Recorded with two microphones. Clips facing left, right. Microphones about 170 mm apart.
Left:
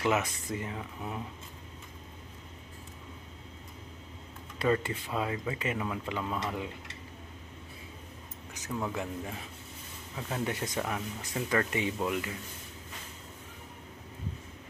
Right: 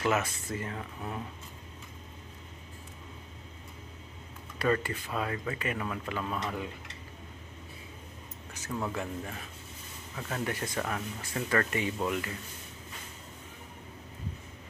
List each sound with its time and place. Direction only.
0.0 s speech: 15° left (ahead or behind)
4.6 s speech: 20° left (ahead or behind)
8.9 s speech: 10° left (ahead or behind)